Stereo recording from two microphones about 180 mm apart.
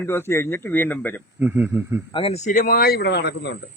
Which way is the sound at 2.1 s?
35° left (ahead or behind).